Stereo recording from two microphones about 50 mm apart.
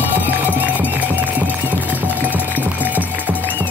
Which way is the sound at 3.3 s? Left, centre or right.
Left.